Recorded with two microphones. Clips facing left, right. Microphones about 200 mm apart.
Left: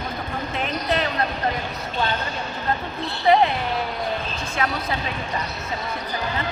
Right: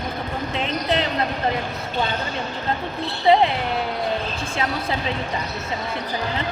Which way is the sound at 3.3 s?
25° right (ahead or behind).